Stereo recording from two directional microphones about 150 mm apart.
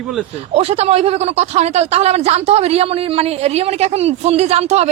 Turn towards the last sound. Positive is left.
turn(degrees=-45)  # may be behind; listen again after turning